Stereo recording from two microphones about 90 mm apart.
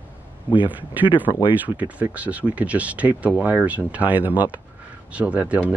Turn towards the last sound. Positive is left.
turn(degrees=-15)  # may be behind; listen again after turning